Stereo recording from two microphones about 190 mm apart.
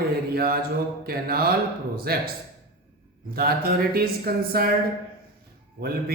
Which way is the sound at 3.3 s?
55° right (ahead or behind).